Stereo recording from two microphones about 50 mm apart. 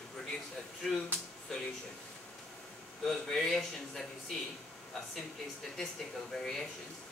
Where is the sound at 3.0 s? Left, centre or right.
Centre.